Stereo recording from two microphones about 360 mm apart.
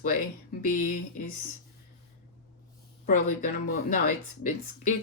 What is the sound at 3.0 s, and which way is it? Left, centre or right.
Speech, left.